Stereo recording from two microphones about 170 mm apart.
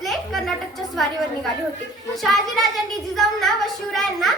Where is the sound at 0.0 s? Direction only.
Centre (ahead or behind).